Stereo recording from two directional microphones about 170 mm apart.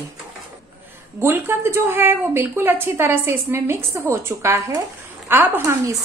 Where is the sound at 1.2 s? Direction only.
15° right (ahead or behind).